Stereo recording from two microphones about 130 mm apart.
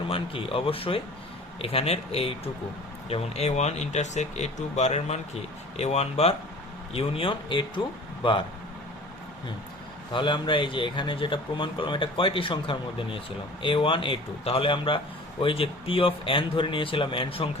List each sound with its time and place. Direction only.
0.1 s speech: 45° left (ahead or behind)
10.1 s speech: 40° left (ahead or behind)